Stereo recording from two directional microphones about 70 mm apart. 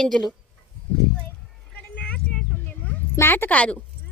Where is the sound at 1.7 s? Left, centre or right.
Centre.